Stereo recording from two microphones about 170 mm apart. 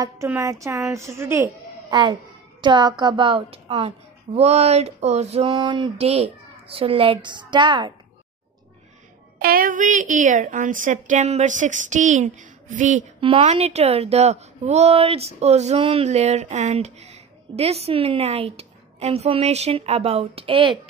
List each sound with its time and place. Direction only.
0.0 s a child's voice: 20° right (ahead or behind); by 5.5 s 40° right (ahead or behind)
5.5 s speech: 25° right (ahead or behind)
9.4 s a woman's voice: 55° right (ahead or behind)
13.2 s a woman's voice: 35° right (ahead or behind)